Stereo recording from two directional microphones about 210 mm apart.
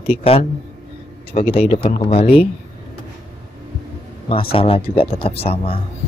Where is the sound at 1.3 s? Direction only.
35° left (ahead or behind).